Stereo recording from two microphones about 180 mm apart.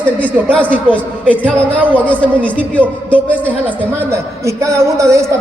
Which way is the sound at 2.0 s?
5° left (ahead or behind).